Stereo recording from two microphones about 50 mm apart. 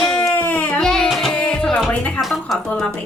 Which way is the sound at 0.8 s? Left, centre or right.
Centre.